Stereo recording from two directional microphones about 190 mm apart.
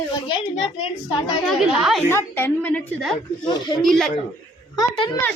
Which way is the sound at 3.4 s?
20° left (ahead or behind).